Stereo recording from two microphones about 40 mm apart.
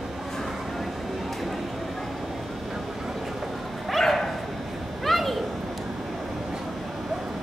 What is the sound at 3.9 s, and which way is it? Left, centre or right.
Dog, centre.